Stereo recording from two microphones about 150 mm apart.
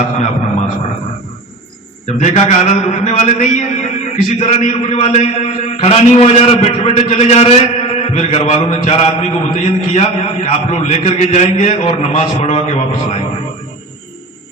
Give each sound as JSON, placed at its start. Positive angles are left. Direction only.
{"t": 2.1, "sound": "a man's voice", "side_deg": 50}